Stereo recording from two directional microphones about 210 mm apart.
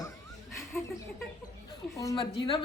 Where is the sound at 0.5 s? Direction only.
15° left (ahead or behind).